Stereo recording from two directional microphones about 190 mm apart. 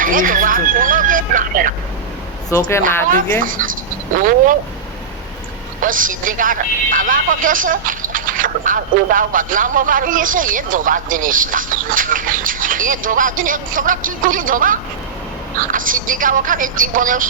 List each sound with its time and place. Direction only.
0.0 s speech: 45° right (ahead or behind)
2.5 s speech: 15° left (ahead or behind)
3.4 s speech: 45° right (ahead or behind)
5.8 s speech: 45° right (ahead or behind)